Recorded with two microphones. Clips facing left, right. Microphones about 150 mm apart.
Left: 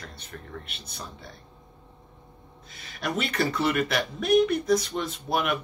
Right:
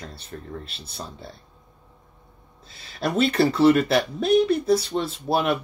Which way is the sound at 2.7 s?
30° right (ahead or behind).